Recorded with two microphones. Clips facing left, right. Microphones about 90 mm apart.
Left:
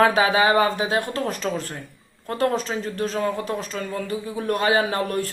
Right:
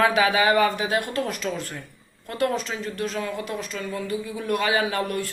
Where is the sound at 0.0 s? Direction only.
35° left (ahead or behind).